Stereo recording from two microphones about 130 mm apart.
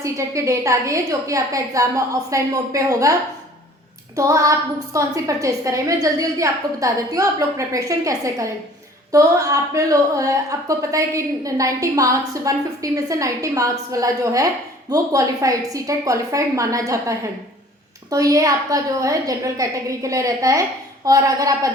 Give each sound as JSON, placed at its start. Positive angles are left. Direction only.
{"t": 0.0, "sound": "a woman's voice", "side_deg": -25}